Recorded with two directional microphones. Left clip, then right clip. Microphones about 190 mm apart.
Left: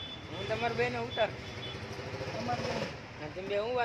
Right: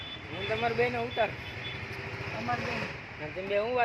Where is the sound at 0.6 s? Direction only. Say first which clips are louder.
Right 4 dB; 20° right (ahead or behind).